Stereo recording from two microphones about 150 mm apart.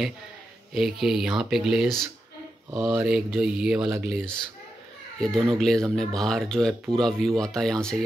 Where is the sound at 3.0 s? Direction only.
5° right (ahead or behind).